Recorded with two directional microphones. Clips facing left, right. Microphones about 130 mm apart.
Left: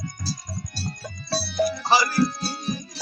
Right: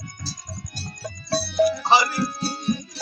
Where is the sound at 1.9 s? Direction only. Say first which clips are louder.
Even; 20° right (ahead or behind).